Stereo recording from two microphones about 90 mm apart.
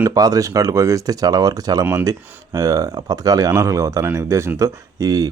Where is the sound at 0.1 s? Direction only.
40° right (ahead or behind).